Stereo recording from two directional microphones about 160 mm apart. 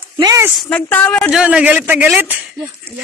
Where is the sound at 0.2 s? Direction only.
20° right (ahead or behind).